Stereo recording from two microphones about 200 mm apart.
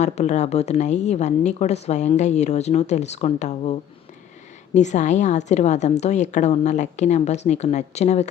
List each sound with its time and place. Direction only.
0.0 s a woman's voice: 35° left (ahead or behind)